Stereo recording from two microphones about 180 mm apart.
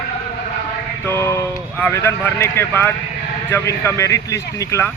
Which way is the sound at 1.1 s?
15° left (ahead or behind).